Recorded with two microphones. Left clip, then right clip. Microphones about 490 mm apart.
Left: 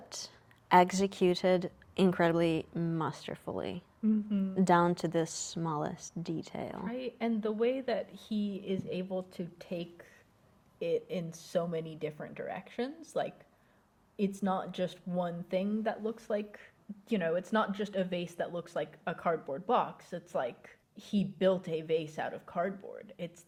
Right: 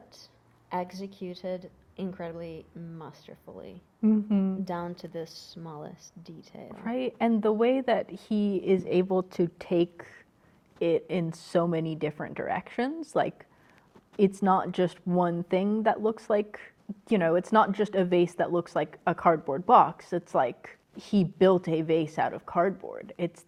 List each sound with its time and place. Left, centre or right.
0.7 s a woman's voice: left
4.0 s speech: right
4.6 s a woman's voice: left
6.8 s a woman's voice: right